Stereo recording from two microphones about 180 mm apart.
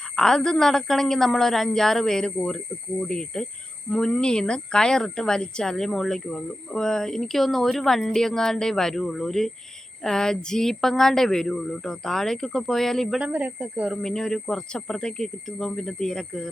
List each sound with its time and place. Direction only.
0.2 s a woman's voice: 5° left (ahead or behind)